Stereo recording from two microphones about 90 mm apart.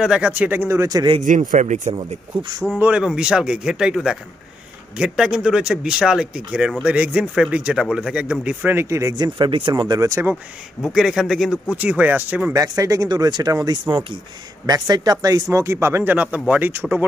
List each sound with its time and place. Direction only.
0.0 s speech: 10° right (ahead or behind); by 1.0 s 40° right (ahead or behind)
2.0 s speech: 55° right (ahead or behind)
2.8 s speech: 15° right (ahead or behind)
8.7 s speech: 35° right (ahead or behind)
9.1 s speech: 55° right (ahead or behind)
9.9 s speech: 35° right (ahead or behind)
10.8 s speech: 5° right (ahead or behind)
11.7 s speech: 15° right (ahead or behind)
12.5 s speech: 40° right (ahead or behind)
15.5 s speech: 30° right (ahead or behind)